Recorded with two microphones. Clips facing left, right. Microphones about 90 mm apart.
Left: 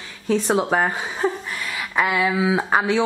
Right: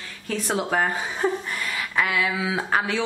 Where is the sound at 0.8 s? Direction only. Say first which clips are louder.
Left 2 dB; 10° left (ahead or behind).